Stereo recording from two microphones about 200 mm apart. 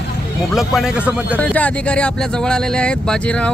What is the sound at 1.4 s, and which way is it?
Speech, 5° left (ahead or behind).